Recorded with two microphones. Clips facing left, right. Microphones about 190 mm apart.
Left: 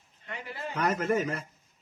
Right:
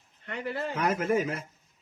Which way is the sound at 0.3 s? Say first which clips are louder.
Right 6 dB; 60° right (ahead or behind).